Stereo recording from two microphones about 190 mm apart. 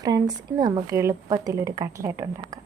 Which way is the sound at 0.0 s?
20° right (ahead or behind).